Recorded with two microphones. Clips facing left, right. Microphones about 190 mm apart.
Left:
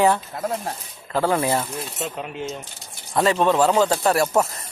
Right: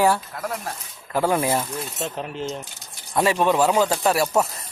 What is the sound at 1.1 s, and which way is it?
Speech, 15° right (ahead or behind).